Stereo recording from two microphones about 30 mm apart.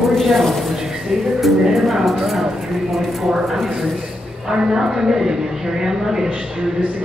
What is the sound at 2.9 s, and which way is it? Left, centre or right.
Speech, centre.